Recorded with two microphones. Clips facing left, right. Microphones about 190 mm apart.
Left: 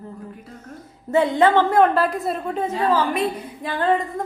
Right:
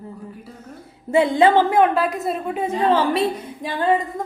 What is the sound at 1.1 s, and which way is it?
A woman's voice, 10° right (ahead or behind).